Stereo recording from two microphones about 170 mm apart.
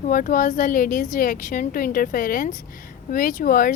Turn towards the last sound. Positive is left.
turn(degrees=55)  # may be behind; listen again after turning